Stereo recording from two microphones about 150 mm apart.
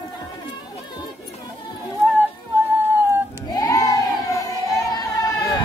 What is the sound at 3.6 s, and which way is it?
Crowd, 20° left (ahead or behind).